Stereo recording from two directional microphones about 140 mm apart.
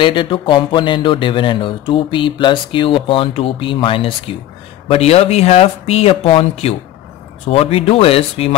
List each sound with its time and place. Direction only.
0.0 s speech: 35° left (ahead or behind)